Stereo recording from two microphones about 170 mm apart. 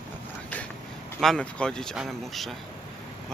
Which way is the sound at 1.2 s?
5° left (ahead or behind).